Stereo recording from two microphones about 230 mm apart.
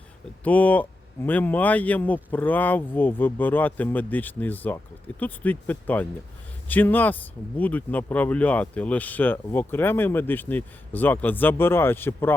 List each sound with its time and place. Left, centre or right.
0.4 s speech: centre